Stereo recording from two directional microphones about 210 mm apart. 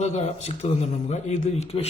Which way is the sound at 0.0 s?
30° left (ahead or behind).